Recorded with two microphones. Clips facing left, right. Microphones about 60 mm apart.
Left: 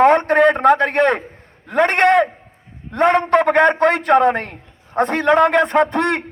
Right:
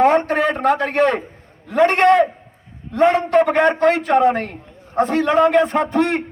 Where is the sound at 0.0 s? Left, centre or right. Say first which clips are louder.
Left 3 dB; left.